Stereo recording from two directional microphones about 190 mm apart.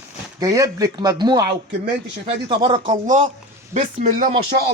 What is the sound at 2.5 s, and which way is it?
Speech, 25° right (ahead or behind).